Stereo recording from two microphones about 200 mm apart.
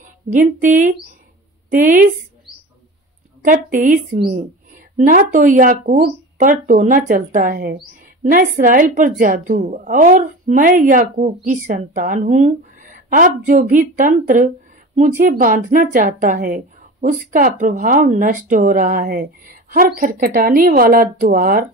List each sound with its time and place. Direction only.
0.3 s a woman's voice: 35° right (ahead or behind)
3.4 s a woman's voice: 40° right (ahead or behind)